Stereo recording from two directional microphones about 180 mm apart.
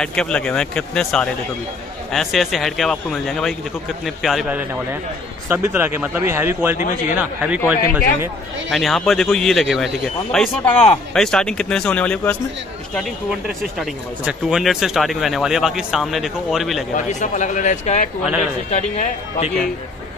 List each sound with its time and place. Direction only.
0.0 s speech: 5° left (ahead or behind)
16.9 s a man's voice: 45° left (ahead or behind)